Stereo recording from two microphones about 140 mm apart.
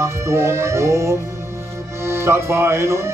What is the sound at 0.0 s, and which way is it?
Speech, 20° right (ahead or behind).